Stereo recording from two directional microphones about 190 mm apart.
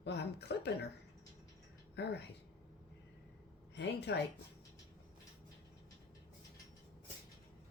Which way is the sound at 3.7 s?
60° left (ahead or behind).